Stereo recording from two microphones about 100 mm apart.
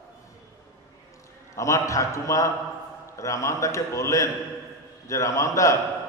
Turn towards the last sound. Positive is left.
turn(degrees=30)  # may be behind; listen again after turning